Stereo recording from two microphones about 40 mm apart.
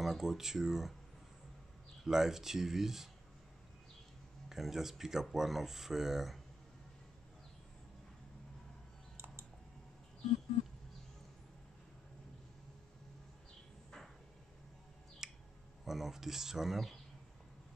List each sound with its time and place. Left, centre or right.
0.0 s speech: centre
2.0 s speech: centre
4.5 s speech: centre
9.1 s a sound: right
15.2 s finger snapping: centre
15.8 s speech: centre